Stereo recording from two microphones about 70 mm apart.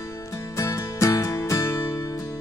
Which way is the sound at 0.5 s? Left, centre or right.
Left.